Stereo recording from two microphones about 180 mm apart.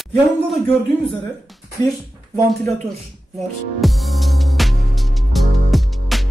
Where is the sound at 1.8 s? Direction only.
20° left (ahead or behind).